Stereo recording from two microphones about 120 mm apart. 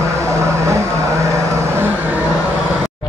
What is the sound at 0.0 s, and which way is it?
Vehicle, 25° right (ahead or behind).